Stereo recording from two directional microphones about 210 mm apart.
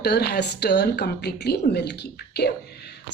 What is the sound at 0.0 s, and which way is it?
Speech, 50° left (ahead or behind).